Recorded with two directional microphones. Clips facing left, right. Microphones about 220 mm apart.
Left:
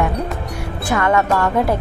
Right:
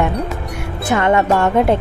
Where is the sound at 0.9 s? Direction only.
25° right (ahead or behind).